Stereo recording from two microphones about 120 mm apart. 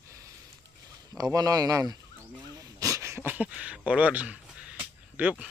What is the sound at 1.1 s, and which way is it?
Speech, 30° right (ahead or behind).